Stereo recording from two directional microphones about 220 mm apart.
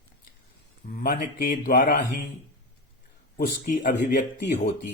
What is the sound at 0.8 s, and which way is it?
Speech, 40° left (ahead or behind).